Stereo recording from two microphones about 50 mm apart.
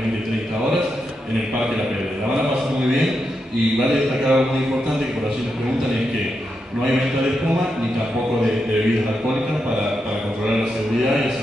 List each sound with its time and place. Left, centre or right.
4.2 s mantra: centre